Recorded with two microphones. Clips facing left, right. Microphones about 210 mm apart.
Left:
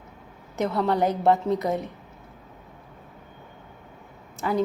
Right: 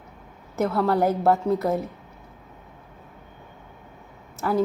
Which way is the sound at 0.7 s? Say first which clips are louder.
Right 1 dB; 20° left (ahead or behind).